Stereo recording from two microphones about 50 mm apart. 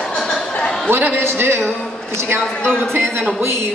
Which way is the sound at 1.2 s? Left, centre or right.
Right.